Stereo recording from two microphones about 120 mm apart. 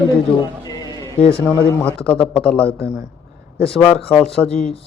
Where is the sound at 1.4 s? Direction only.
15° left (ahead or behind).